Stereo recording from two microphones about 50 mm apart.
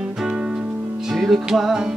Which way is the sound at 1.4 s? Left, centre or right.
Centre.